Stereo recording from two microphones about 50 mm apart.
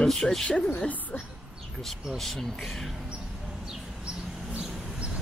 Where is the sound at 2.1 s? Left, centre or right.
Centre.